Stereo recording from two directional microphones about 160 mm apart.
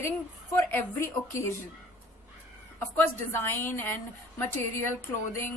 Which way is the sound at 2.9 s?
15° left (ahead or behind).